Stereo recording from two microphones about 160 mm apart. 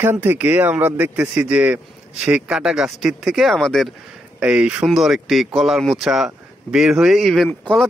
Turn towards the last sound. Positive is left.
turn(degrees=5)  # may be behind; listen again after turning